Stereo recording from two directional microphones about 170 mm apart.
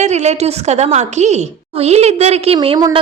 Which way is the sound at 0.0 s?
40° right (ahead or behind).